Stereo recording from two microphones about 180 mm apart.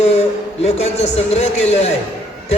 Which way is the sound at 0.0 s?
35° left (ahead or behind).